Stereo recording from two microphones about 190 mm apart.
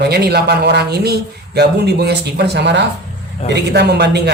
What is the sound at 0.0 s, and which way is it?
Speech, 60° right (ahead or behind).